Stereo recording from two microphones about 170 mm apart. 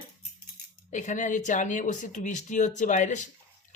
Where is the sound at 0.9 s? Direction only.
45° left (ahead or behind).